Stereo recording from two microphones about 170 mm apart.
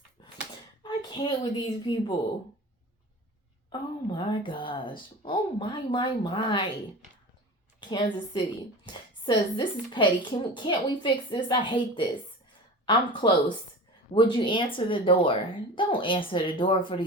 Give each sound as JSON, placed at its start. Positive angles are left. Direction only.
{"t": 0.2, "sound": "a sound", "side_deg": 25}
{"t": 0.8, "sound": "a woman's voice", "side_deg": 25}
{"t": 3.7, "sound": "a woman's voice", "side_deg": 25}
{"t": 7.8, "sound": "a woman's voice", "side_deg": 30}